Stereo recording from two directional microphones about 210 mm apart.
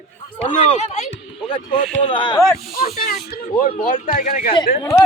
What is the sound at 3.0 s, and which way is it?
Speech, 45° left (ahead or behind).